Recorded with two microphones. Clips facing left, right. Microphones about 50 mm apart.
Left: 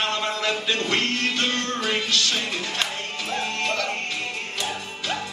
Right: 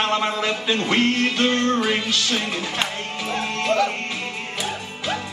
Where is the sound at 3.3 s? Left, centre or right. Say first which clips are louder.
Right 4 dB; centre.